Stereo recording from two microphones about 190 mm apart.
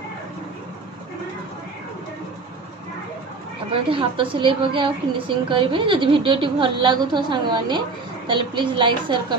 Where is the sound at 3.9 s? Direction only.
25° right (ahead or behind).